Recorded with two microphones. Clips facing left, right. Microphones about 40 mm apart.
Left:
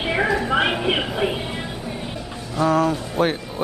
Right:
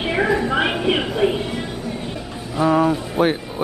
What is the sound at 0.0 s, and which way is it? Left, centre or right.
Music, centre.